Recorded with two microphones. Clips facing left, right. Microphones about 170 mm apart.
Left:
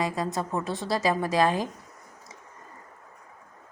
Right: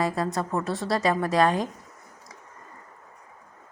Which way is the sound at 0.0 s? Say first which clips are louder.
Right 2 dB; centre (ahead or behind).